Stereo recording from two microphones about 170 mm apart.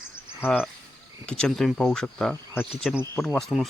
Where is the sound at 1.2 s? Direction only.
5° left (ahead or behind).